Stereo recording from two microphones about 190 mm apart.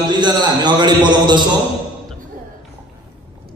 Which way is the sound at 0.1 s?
25° right (ahead or behind).